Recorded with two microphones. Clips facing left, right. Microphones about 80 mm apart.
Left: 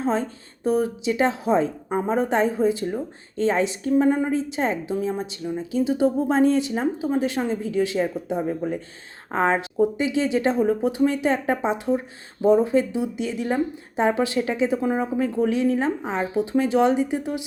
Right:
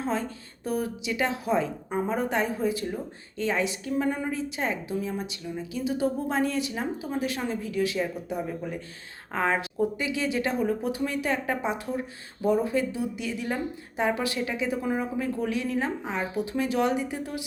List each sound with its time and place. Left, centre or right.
0.0 s a woman's voice: left